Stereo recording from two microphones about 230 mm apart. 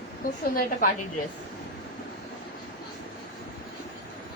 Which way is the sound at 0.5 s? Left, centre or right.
Left.